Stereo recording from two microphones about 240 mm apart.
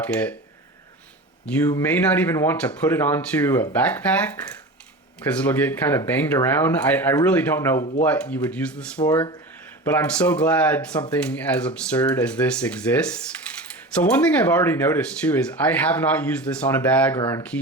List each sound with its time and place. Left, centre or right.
0.0 s speech: centre
1.5 s speech: centre
7.8 s speech: left
8.0 s speech: centre
9.0 s speech: centre
9.8 s speech: centre
17.2 s speech: centre